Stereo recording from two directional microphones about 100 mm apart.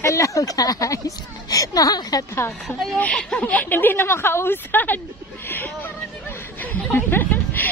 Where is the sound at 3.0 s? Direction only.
10° left (ahead or behind).